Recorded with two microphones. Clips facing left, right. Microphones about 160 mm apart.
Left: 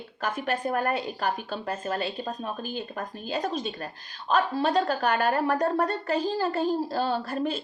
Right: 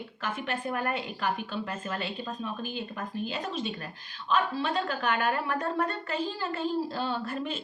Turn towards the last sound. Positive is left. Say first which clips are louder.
# left 4 dB
turn(degrees=40)  # may be behind; listen again after turning